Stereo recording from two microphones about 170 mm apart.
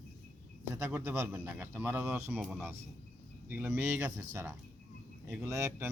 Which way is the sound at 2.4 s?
Centre (ahead or behind).